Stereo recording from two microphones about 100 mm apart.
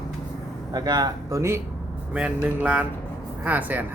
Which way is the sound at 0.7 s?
45° right (ahead or behind).